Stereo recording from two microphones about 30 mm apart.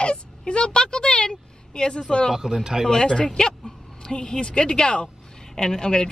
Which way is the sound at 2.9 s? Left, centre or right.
Left.